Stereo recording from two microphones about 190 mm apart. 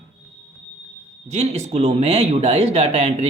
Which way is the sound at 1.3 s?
35° right (ahead or behind).